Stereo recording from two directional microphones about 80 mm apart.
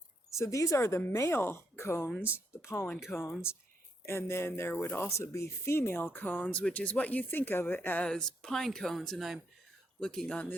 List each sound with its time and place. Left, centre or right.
0.3 s speech: left
2.9 s speech: centre
4.0 s speech: left
8.1 s speech: centre
10.0 s speech: centre